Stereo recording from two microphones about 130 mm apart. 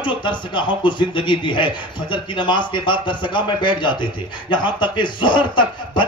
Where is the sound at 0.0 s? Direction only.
35° left (ahead or behind).